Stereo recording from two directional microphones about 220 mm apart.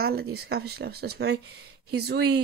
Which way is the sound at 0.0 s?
45° right (ahead or behind).